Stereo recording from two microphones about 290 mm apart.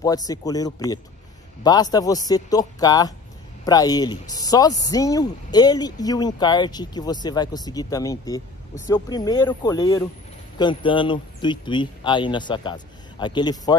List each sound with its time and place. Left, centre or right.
0.0 s speech: centre